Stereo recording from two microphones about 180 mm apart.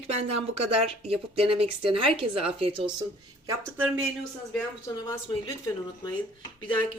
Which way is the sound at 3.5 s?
10° right (ahead or behind).